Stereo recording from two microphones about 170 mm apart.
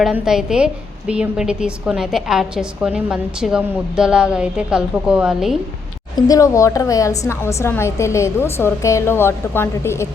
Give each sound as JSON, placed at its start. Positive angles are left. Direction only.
{"t": 0.0, "sound": "a woman's voice", "side_deg": -5}
{"t": 6.2, "sound": "a woman's voice", "side_deg": 20}